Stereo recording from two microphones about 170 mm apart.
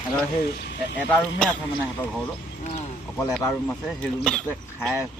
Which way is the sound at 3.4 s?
15° left (ahead or behind).